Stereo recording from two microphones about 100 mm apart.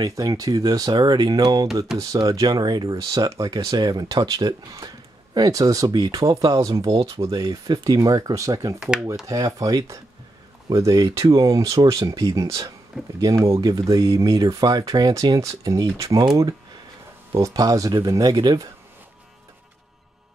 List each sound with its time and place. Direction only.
0.0 s speech: 35° right (ahead or behind)
8.7 s speech: 10° right (ahead or behind)
9.3 s speech: 35° right (ahead or behind)
17.3 s speech: 35° right (ahead or behind)